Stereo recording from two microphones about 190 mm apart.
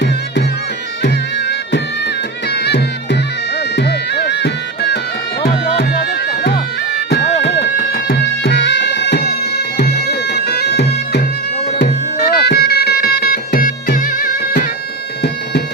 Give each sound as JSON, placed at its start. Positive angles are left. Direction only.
{"t": 1.0, "sound": "music", "side_deg": 65}
{"t": 3.8, "sound": "bagpipes", "side_deg": 60}
{"t": 5.4, "sound": "music", "side_deg": 60}
{"t": 9.7, "sound": "bagpipes", "side_deg": 60}
{"t": 11.8, "sound": "music", "side_deg": 60}